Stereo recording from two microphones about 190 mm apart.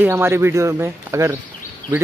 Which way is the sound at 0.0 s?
10° right (ahead or behind).